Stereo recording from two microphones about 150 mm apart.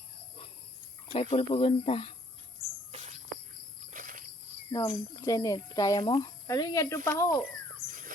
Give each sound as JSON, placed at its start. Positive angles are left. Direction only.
{"t": 1.1, "sound": "speech", "side_deg": 40}
{"t": 2.9, "sound": "bird", "side_deg": -50}
{"t": 3.9, "sound": "insect", "side_deg": -65}
{"t": 4.7, "sound": "speech", "side_deg": 20}